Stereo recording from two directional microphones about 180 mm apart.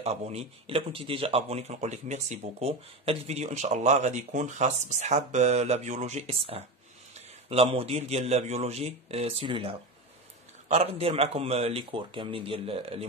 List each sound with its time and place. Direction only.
0.0 s speech: 35° right (ahead or behind)